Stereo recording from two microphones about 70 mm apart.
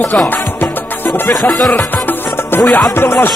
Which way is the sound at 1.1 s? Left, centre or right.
Centre.